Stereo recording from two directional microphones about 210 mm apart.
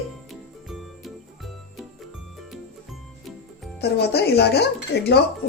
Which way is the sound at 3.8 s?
50° left (ahead or behind).